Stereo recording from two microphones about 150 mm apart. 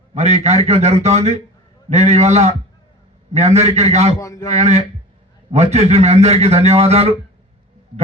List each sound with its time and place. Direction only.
0.1 s a man's voice: 45° right (ahead or behind)
4.2 s a man's voice: 20° left (ahead or behind)
4.4 s a man's voice: 45° right (ahead or behind)